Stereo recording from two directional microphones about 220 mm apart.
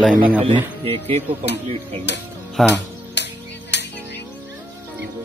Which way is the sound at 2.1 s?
50° left (ahead or behind).